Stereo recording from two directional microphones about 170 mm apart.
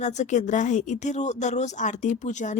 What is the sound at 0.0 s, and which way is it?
Speech, 45° left (ahead or behind).